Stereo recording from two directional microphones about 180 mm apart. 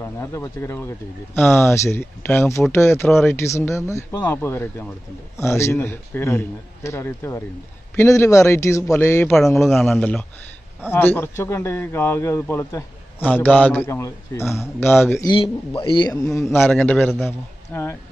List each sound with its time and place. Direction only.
0.0 s a man's voice: 15° left (ahead or behind)
9.6 s a man's voice: centre (ahead or behind)
15.2 s a man's voice: 30° left (ahead or behind)
16.6 s a man's voice: 5° left (ahead or behind)